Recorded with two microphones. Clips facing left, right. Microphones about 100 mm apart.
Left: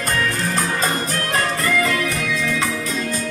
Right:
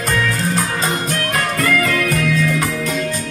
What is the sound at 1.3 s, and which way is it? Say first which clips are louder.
Music: right 2 dB; 30° left (ahead or behind).